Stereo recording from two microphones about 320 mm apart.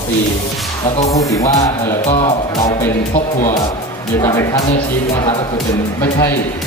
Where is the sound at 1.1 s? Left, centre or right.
Centre.